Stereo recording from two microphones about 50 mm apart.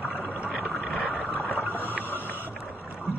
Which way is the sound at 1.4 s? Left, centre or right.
Left.